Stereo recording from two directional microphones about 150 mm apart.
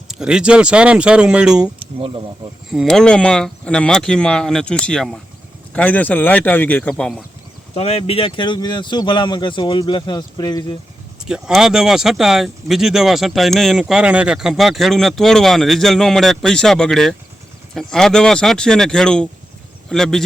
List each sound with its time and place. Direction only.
0.1 s speech: 5° right (ahead or behind)
2.0 s speech: 35° right (ahead or behind)
2.6 s speech: centre (ahead or behind)
6.9 s speech: centre (ahead or behind)
7.7 s speech: 45° left (ahead or behind); by 10.8 s 25° left (ahead or behind)
11.3 s speech: 5° right (ahead or behind)